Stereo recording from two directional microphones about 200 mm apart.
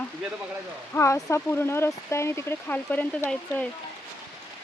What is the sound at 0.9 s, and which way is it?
Speech, 15° left (ahead or behind).